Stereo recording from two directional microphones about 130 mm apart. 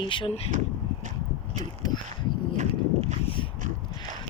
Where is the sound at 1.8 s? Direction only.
30° left (ahead or behind).